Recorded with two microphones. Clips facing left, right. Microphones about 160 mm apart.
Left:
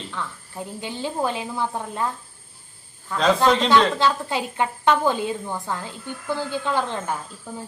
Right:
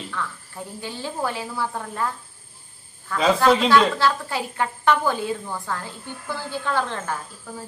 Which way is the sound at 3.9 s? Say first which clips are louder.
Left 1 dB; 20° left (ahead or behind).